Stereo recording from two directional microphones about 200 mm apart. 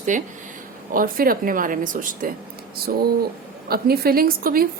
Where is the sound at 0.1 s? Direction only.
40° right (ahead or behind).